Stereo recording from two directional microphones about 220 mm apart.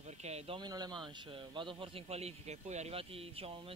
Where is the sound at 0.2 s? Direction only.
25° right (ahead or behind).